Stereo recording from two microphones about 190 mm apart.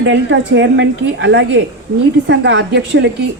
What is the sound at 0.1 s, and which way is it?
A woman's voice, 70° right (ahead or behind).